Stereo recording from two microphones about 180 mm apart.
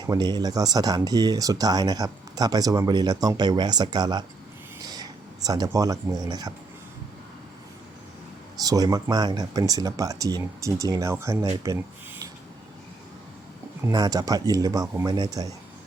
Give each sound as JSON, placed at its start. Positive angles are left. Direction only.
{"t": 0.0, "sound": "speech", "side_deg": -25}
{"t": 8.6, "sound": "speech", "side_deg": -20}
{"t": 13.8, "sound": "speech", "side_deg": -20}